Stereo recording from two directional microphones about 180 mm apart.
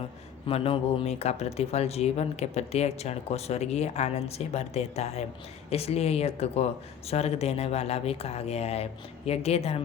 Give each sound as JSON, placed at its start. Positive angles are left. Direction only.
{"t": 0.4, "sound": "speech", "side_deg": 30}